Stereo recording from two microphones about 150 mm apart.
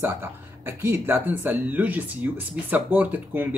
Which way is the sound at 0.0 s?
15° right (ahead or behind).